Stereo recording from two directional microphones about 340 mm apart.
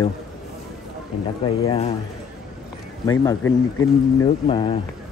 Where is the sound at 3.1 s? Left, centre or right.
Centre.